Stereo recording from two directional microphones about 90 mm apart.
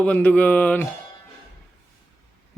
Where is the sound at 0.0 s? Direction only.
15° left (ahead or behind).